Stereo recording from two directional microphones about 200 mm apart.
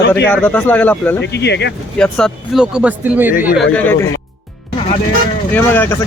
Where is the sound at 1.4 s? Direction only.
60° left (ahead or behind).